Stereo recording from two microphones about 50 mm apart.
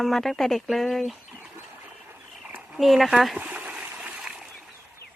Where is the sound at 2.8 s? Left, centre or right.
Centre.